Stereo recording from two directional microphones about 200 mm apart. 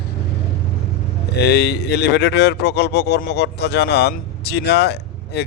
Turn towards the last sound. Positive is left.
turn(degrees=55)  # may be behind; listen again after turning